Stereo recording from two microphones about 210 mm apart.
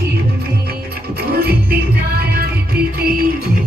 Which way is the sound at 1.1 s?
45° right (ahead or behind).